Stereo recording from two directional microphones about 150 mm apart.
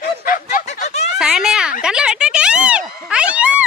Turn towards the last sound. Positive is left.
turn(degrees=-10)  # may be behind; listen again after turning